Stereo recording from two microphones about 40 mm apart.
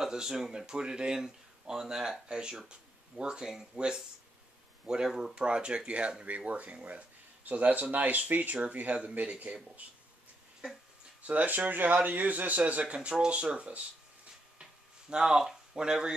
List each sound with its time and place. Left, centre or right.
0.0 s speech: centre
5.3 s speech: right
6.2 s speech: right
11.2 s a man's voice: right
12.8 s speech: right
14.6 s a sound: right
15.2 s speech: centre
15.7 s speech: centre